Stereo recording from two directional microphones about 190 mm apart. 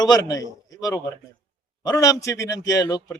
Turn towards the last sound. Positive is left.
turn(degrees=20)  # may be behind; listen again after turning